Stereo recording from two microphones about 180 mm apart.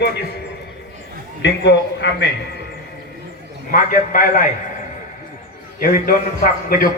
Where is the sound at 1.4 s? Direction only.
75° left (ahead or behind).